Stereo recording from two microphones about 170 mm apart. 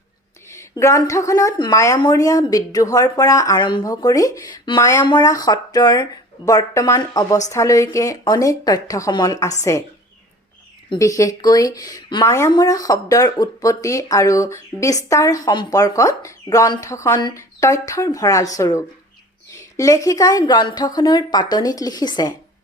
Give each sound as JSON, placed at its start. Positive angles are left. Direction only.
{"t": 0.5, "sound": "a woman's voice", "side_deg": 20}